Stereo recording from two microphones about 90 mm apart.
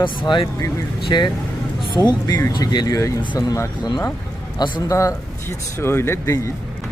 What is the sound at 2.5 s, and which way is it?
Speech, 50° left (ahead or behind).